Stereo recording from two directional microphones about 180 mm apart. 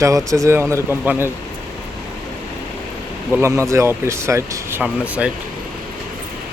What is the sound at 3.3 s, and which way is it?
Speech, 15° right (ahead or behind).